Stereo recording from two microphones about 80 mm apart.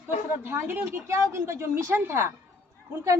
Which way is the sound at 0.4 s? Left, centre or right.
Right.